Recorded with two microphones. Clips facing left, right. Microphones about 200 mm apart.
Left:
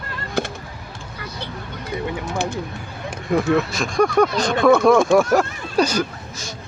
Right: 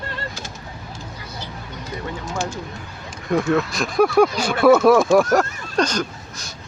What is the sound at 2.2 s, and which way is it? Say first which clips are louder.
Speech: left 2 dB; 60° left (ahead or behind).